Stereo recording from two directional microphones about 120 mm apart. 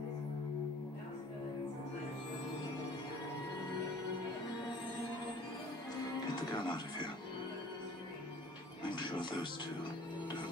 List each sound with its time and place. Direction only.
6.5 s speech: 40° left (ahead or behind)
8.9 s music: 40° left (ahead or behind)